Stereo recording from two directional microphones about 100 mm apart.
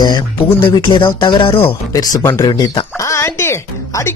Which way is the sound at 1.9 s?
35° left (ahead or behind).